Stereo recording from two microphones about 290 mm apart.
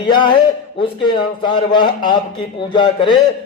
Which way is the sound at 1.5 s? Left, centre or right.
Centre.